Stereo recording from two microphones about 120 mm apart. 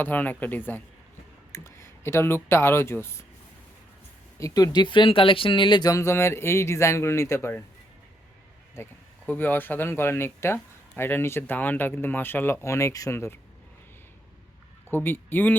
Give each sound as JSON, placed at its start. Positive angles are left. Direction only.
{"t": 0.0, "sound": "speech", "side_deg": 15}
{"t": 4.4, "sound": "speech", "side_deg": 30}
{"t": 5.9, "sound": "speech", "side_deg": 20}
{"t": 8.7, "sound": "speech", "side_deg": 15}
{"t": 14.8, "sound": "speech", "side_deg": 20}